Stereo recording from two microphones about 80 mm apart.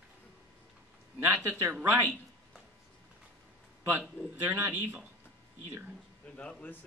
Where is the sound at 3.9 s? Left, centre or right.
Right.